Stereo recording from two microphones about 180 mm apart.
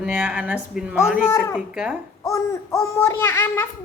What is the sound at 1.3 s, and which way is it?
Speech, 15° left (ahead or behind).